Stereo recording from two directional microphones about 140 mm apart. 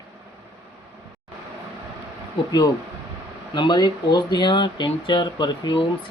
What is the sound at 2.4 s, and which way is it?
Speech, 35° left (ahead or behind).